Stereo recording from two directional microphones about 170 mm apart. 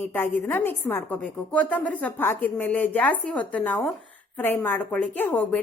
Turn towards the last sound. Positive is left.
turn(degrees=10)  # may be behind; listen again after turning